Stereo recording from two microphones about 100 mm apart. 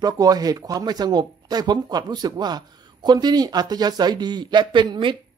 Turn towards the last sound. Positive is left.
turn(degrees=-55)  # may be behind; listen again after turning